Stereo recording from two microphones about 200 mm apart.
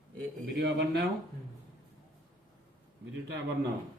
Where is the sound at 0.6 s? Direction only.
55° right (ahead or behind).